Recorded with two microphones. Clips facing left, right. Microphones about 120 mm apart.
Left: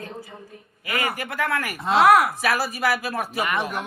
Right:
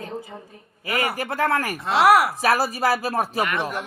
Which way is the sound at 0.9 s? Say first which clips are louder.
Right 2 dB; 30° right (ahead or behind).